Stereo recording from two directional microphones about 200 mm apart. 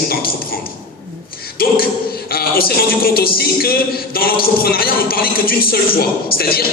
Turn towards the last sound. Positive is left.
turn(degrees=50)  # may be behind; listen again after turning